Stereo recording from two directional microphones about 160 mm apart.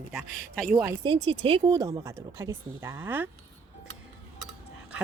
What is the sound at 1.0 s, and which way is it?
Speech, 35° right (ahead or behind).